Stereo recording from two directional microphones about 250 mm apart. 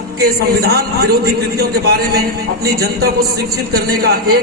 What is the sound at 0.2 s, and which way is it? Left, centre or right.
A man's voice, right.